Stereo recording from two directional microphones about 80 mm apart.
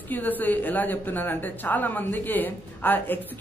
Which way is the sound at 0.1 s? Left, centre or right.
Left.